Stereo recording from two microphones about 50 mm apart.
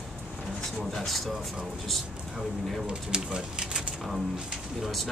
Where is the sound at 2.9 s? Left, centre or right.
Right.